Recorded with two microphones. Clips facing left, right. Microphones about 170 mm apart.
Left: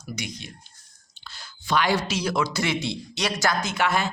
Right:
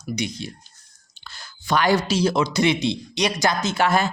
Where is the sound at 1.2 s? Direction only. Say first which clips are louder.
Right 3 dB; 50° right (ahead or behind); by 3.7 s 20° right (ahead or behind).